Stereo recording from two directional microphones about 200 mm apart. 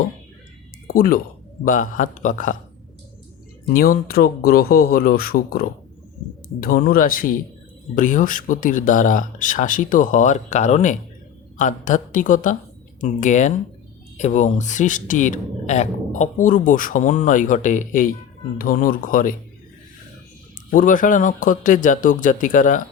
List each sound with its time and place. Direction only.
0.9 s a man's voice: 45° left (ahead or behind)
3.7 s a man's voice: 45° left (ahead or behind)
20.7 s a man's voice: 45° left (ahead or behind)